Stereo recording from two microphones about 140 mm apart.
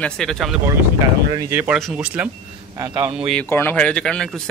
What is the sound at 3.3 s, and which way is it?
Speech, 10° left (ahead or behind).